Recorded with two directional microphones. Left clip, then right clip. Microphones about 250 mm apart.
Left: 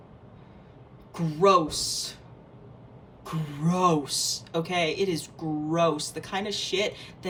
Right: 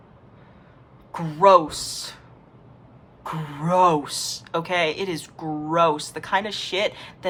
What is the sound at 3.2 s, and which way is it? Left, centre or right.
Speech, centre.